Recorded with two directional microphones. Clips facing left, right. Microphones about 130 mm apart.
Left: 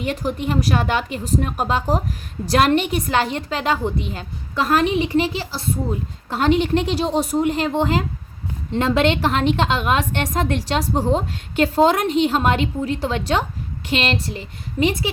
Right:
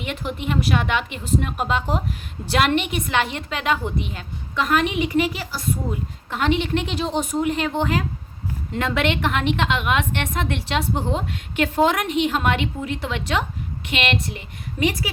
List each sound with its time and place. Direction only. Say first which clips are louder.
0.0 s a woman's voice: left 4 dB; 35° left (ahead or behind)